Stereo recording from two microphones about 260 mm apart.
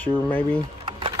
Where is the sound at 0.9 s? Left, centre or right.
Centre.